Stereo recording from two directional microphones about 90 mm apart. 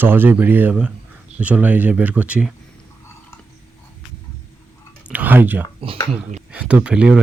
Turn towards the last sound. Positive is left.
turn(degrees=-10)  # may be behind; listen again after turning